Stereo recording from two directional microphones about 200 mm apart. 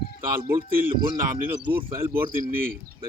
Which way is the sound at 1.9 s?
10° right (ahead or behind).